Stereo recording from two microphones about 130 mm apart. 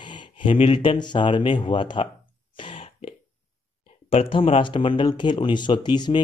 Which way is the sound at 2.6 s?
40° left (ahead or behind).